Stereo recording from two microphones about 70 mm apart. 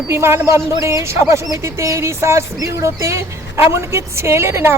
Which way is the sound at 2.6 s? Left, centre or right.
Right.